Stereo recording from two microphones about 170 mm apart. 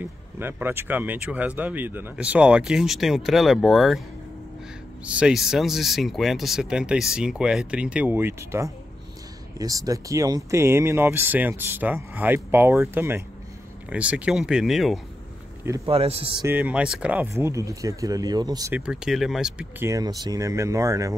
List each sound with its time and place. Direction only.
0.0 s speech: 10° right (ahead or behind)
5.0 s speech: 5° right (ahead or behind)
15.6 s speech: 20° right (ahead or behind)
15.9 s speech: 35° right (ahead or behind)
16.4 s speech: 10° right (ahead or behind)
18.7 s speech: 5° right (ahead or behind)
19.9 s speech: 20° right (ahead or behind)